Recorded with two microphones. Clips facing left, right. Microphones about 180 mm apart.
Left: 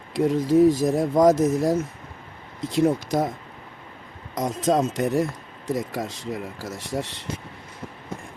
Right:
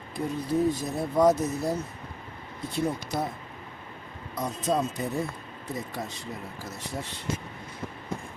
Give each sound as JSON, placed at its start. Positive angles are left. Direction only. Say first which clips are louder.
{"t": 0.1, "sound": "speech", "louder": "left 9 dB", "side_deg": 90}
{"t": 4.4, "sound": "speech", "louder": "left 6 dB", "side_deg": 90}